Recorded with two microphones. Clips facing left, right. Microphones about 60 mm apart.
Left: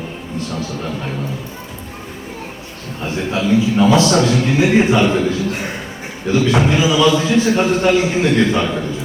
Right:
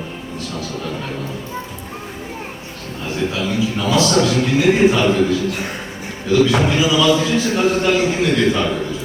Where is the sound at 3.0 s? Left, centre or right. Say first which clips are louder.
Left 2 dB; left.